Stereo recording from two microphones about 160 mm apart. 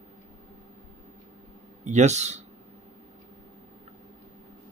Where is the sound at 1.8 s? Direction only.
45° right (ahead or behind).